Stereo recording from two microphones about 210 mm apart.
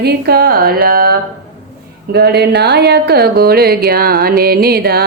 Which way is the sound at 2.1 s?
50° right (ahead or behind).